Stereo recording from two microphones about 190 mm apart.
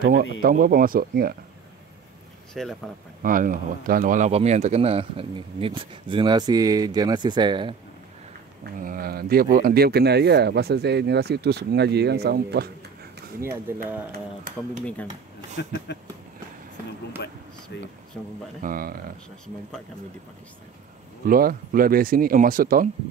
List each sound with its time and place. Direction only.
0.0 s speech: 55° right (ahead or behind)
2.5 s speech: centre (ahead or behind)
3.2 s speech: 45° right (ahead or behind); by 7.7 s 25° right (ahead or behind)
8.7 s speech: 50° right (ahead or behind)
13.4 s speech: 15° right (ahead or behind)
15.5 s speech: 60° left (ahead or behind)
17.7 s speech: 70° left (ahead or behind)
18.6 s speech: 50° right (ahead or behind)
21.3 s speech: 50° right (ahead or behind)